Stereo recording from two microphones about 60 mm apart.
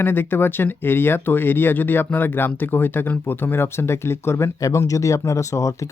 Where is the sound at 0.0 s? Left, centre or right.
Left.